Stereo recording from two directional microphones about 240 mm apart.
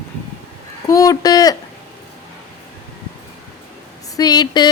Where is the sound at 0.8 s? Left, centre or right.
Centre.